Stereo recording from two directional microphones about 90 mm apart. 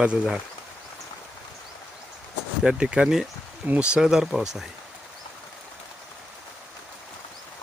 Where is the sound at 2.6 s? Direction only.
10° right (ahead or behind).